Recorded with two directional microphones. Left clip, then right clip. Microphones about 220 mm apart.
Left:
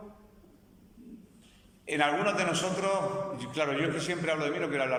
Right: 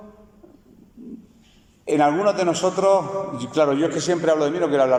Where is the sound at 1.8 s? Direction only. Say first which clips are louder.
Right 10 dB; 20° right (ahead or behind).